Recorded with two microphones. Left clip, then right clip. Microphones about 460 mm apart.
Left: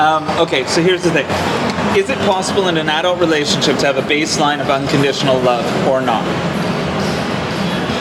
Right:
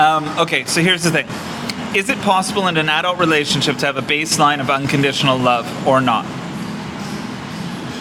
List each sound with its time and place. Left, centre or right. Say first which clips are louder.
0.0 s speech: left 1 dB; right
2.6 s speech: left 1 dB; right